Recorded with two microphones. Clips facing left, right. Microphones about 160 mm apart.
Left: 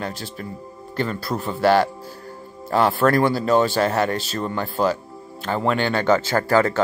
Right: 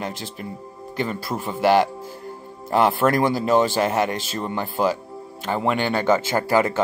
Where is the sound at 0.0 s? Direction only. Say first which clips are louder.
Even; 20° right (ahead or behind).